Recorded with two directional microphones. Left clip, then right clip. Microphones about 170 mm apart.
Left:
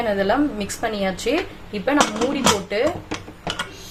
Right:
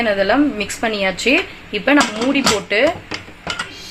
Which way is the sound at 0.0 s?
40° right (ahead or behind).